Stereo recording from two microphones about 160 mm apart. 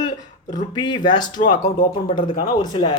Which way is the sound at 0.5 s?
25° left (ahead or behind).